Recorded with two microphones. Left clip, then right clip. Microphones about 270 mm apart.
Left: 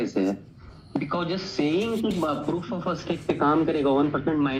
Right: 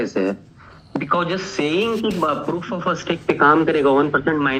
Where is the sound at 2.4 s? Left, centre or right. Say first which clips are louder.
Right 6 dB; right.